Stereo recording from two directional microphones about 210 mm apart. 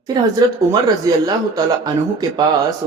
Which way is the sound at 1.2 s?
20° right (ahead or behind).